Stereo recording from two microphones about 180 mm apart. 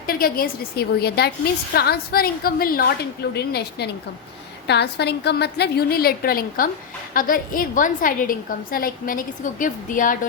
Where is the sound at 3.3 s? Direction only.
65° left (ahead or behind).